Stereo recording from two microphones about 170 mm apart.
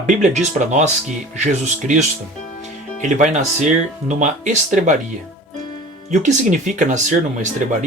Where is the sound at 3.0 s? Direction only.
45° right (ahead or behind).